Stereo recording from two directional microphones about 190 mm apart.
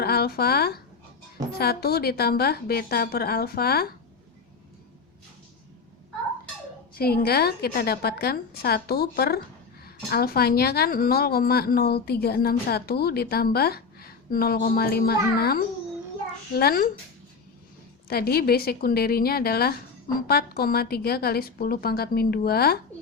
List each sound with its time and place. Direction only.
0.0 s speech: 55° left (ahead or behind)
6.9 s a woman's voice: 55° left (ahead or behind)
18.1 s a woman's voice: 55° left (ahead or behind)